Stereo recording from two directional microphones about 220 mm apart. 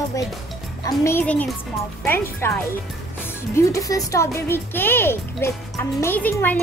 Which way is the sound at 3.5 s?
15° left (ahead or behind).